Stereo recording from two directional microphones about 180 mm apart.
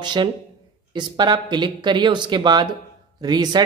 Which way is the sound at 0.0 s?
25° right (ahead or behind).